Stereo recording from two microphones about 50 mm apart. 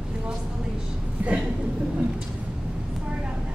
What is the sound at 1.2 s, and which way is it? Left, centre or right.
Speech, right.